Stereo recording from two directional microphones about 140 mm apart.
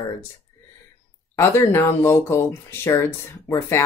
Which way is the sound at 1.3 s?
15° left (ahead or behind).